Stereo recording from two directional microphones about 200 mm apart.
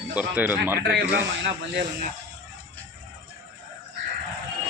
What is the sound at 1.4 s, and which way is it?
Speech, 55° right (ahead or behind).